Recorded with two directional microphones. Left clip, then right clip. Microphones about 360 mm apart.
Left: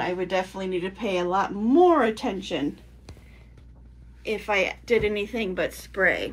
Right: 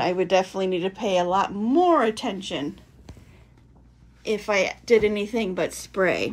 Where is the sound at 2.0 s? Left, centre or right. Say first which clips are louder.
Right 1 dB; centre.